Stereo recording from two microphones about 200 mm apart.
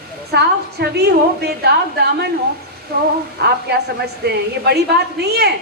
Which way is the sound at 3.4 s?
55° right (ahead or behind).